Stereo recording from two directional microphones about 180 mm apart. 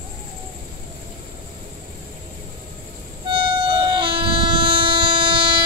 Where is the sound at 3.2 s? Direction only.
25° right (ahead or behind).